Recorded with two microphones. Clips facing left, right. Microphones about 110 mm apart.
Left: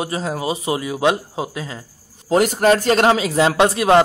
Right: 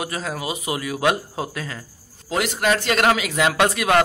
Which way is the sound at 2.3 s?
40° left (ahead or behind).